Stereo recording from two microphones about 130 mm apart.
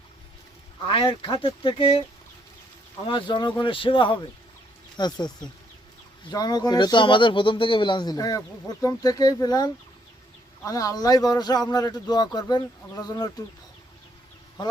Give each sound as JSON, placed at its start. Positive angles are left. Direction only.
{"t": 0.9, "sound": "speech", "side_deg": 40}
{"t": 3.1, "sound": "speech", "side_deg": 40}
{"t": 6.3, "sound": "speech", "side_deg": 30}